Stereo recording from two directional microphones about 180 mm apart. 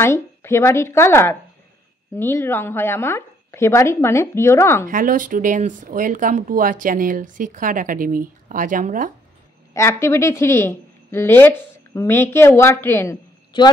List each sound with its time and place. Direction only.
0.0 s a woman's voice: 15° left (ahead or behind)
4.8 s speech: 50° right (ahead or behind)
9.8 s a woman's voice: 15° left (ahead or behind)